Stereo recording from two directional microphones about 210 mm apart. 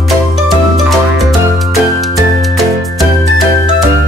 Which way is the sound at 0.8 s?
Centre (ahead or behind).